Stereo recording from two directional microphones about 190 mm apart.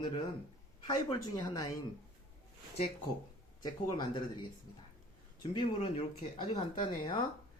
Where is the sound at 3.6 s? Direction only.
20° left (ahead or behind).